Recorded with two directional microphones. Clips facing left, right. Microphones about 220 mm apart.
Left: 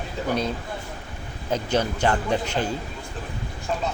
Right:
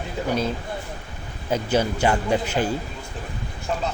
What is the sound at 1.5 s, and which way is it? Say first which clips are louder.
Speech: right 2 dB; 10° right (ahead or behind).